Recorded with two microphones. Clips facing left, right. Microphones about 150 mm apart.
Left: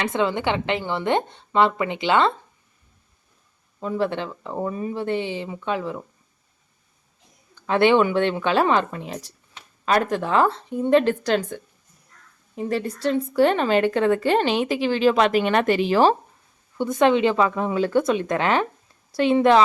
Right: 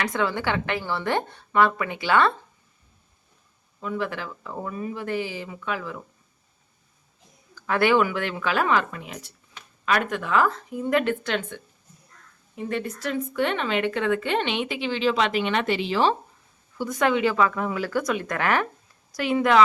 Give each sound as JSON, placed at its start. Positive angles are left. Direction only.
{"t": 0.0, "sound": "a woman's voice", "side_deg": 20}
{"t": 3.8, "sound": "a woman's voice", "side_deg": 35}
{"t": 7.5, "sound": "a woman's voice", "side_deg": 25}
{"t": 16.7, "sound": "a woman's voice", "side_deg": 25}